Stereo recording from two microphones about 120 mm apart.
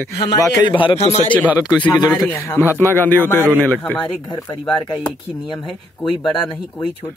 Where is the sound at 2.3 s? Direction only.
25° left (ahead or behind).